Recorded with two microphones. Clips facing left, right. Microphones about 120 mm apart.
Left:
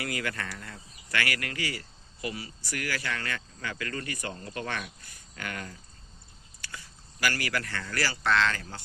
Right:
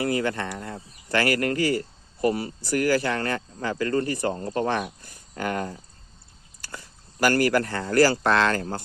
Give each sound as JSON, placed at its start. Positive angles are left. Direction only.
{"t": 0.0, "sound": "speech", "side_deg": -30}
{"t": 7.2, "sound": "speech", "side_deg": -45}